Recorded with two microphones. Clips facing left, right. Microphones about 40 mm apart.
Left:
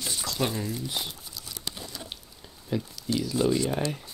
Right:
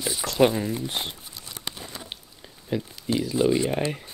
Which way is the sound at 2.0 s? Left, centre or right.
Right.